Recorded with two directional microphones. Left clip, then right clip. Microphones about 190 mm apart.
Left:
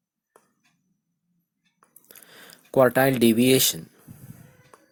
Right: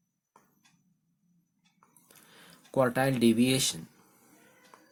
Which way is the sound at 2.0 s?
35° left (ahead or behind).